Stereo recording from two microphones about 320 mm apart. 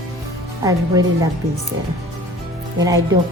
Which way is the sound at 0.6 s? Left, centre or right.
Centre.